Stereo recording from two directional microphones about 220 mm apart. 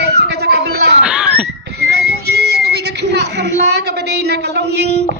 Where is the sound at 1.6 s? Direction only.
45° right (ahead or behind).